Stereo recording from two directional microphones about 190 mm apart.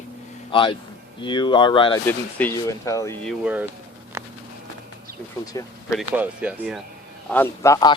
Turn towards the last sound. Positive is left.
turn(degrees=15)  # may be behind; listen again after turning